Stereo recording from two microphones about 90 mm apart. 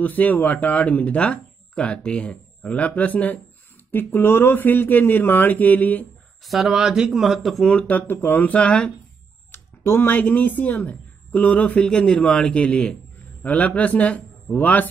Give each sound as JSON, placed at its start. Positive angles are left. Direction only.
{"t": 0.0, "sound": "speech", "side_deg": 20}
{"t": 6.4, "sound": "speech", "side_deg": 0}
{"t": 7.7, "sound": "speech", "side_deg": 20}
{"t": 9.5, "sound": "speech", "side_deg": 25}